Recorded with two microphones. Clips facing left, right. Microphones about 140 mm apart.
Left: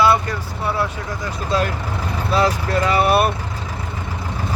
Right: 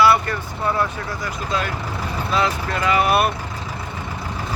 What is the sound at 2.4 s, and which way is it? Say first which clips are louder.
Speech: left 5 dB; 35° left (ahead or behind).